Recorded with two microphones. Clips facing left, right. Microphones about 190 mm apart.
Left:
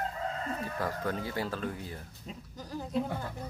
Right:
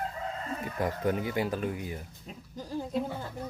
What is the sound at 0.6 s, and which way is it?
Speech, 15° right (ahead or behind).